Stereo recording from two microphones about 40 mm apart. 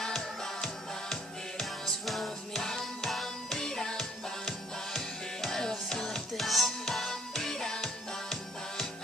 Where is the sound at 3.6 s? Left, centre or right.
Centre.